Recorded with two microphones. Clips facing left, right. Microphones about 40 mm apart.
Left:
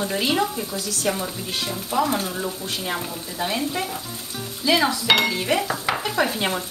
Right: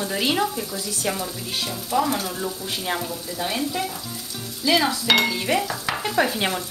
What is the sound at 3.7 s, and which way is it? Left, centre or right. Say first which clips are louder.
Speech: even; centre.